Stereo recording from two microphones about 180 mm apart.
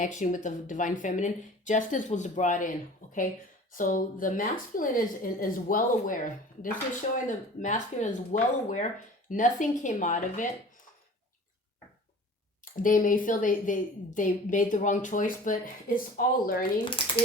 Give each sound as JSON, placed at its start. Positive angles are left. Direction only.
{"t": 0.0, "sound": "speech", "side_deg": 45}
{"t": 7.3, "sound": "speech", "side_deg": 45}
{"t": 12.6, "sound": "speech", "side_deg": 50}